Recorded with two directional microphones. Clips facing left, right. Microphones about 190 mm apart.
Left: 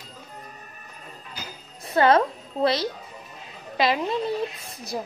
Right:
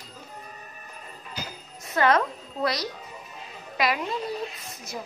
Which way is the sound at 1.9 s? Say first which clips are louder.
Left 4 dB; 30° left (ahead or behind).